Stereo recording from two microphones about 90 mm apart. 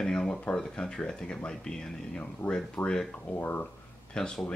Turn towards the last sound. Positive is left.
turn(degrees=10)  # may be behind; listen again after turning